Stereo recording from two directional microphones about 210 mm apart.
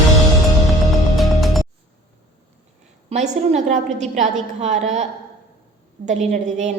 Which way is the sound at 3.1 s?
30° right (ahead or behind).